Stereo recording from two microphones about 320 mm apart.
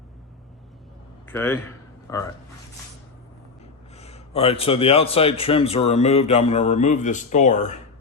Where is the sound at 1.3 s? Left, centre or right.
Centre.